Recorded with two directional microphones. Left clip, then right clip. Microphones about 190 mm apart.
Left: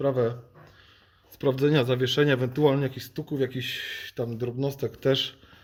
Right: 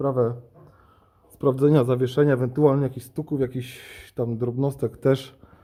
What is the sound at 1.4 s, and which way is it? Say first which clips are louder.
Speech: right 4 dB; 20° right (ahead or behind).